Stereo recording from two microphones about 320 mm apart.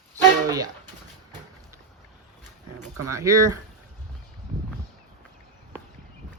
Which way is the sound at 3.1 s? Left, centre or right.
Centre.